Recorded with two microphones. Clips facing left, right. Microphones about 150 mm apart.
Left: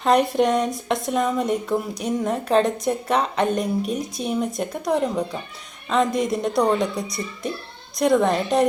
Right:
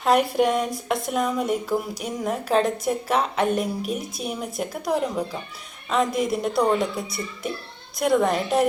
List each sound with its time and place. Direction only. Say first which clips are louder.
0.0 s speech: left 1 dB; 5° right (ahead or behind)